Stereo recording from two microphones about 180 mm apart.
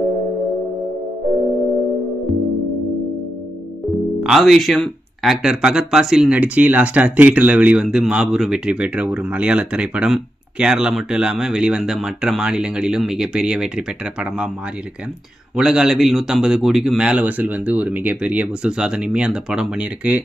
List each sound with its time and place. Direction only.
4.2 s speech: centre (ahead or behind)
15.5 s speech: 5° right (ahead or behind)